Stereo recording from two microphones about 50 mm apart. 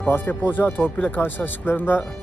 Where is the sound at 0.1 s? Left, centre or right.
Left.